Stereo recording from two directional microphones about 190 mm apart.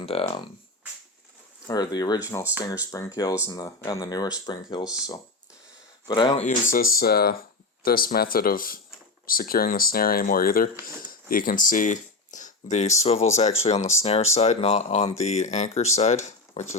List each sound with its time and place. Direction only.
0.0 s speech: 30° left (ahead or behind)
1.6 s speech: 20° left (ahead or behind)
6.1 s speech: 25° left (ahead or behind)
6.4 s speech: 45° left (ahead or behind)
6.9 s speech: 55° left (ahead or behind); by 16.6 s 40° left (ahead or behind)